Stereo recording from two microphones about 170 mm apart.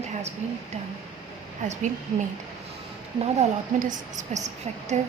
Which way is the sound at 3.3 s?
45° right (ahead or behind).